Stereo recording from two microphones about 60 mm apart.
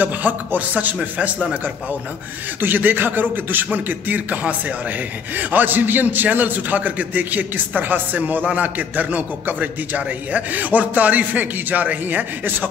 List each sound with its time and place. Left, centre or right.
0.0 s a man's voice: right
2.6 s a man's voice: right